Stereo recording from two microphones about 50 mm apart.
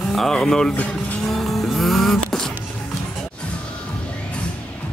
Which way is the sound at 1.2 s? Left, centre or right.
Centre.